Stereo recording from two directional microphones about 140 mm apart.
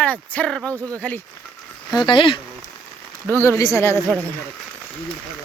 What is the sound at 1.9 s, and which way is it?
Speech, 35° left (ahead or behind).